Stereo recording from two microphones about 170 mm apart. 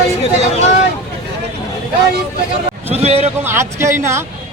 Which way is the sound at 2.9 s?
35° right (ahead or behind).